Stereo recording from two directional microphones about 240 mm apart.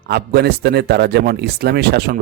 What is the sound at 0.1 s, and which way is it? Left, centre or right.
Speech, right.